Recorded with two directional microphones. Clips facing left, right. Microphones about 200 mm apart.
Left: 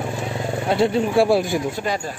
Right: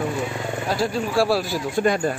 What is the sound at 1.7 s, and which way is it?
Speech, 55° right (ahead or behind).